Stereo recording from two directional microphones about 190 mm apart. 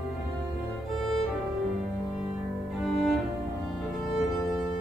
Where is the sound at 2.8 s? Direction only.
Centre (ahead or behind).